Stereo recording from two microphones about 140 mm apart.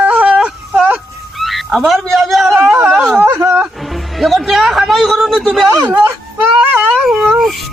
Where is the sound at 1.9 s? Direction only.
Centre (ahead or behind).